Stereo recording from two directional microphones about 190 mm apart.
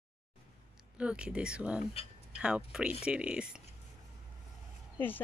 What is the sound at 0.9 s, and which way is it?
Speech, 5° right (ahead or behind).